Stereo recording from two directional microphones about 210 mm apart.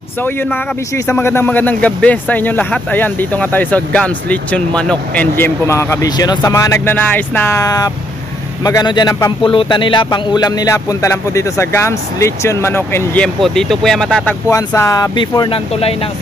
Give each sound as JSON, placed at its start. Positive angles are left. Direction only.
{"t": 0.2, "sound": "speech", "side_deg": 10}
{"t": 14.5, "sound": "speech", "side_deg": 15}